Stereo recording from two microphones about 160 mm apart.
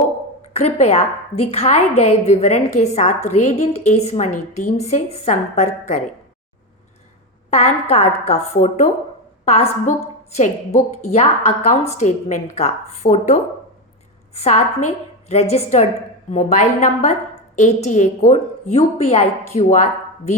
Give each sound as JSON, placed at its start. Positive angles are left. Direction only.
{"t": 0.5, "sound": "a woman's voice", "side_deg": 45}
{"t": 7.5, "sound": "a woman's voice", "side_deg": 40}